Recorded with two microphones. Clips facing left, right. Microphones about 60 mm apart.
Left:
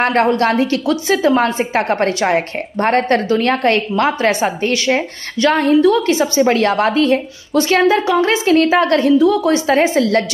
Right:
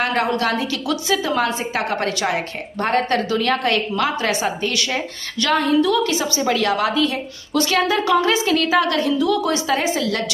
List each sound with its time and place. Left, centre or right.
0.0 s a woman's voice: left